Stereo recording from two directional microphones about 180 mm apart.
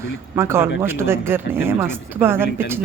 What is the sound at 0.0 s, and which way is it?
Speech, 15° right (ahead or behind).